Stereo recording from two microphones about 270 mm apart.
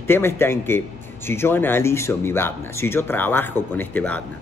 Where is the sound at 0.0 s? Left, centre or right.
Centre.